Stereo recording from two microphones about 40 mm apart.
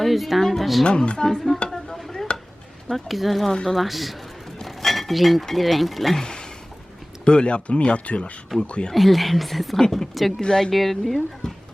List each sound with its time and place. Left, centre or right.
0.0 s speech: centre
0.9 s speech: left
1.2 s speech: centre
2.0 s stir: centre
2.9 s speech: centre
6.2 s a sound: centre
7.3 s speech: left
8.9 s speech: centre
10.4 s speech: centre
10.7 s speech: centre